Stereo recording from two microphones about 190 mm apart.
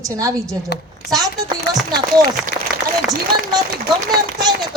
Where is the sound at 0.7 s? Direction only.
60° left (ahead or behind).